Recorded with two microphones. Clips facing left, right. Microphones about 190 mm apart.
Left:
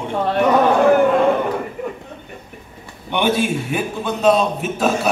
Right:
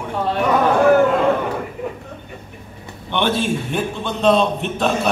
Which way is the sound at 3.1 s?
10° left (ahead or behind).